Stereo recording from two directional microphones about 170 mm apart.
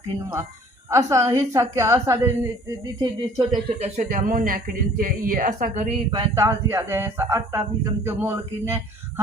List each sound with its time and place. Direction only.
0.9 s a woman's voice: 15° right (ahead or behind)
3.8 s a man's voice: 45° right (ahead or behind)
6.1 s speech: 25° right (ahead or behind)
6.4 s a woman's voice: 15° right (ahead or behind)